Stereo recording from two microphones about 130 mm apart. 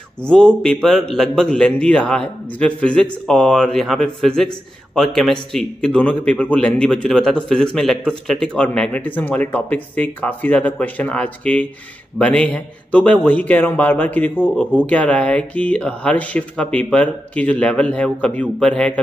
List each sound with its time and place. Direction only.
0.2 s a man's voice: 10° left (ahead or behind)